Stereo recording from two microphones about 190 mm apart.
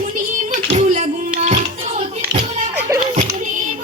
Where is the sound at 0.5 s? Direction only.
35° right (ahead or behind).